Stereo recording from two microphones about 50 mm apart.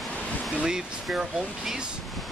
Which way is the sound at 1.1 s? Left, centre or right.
Centre.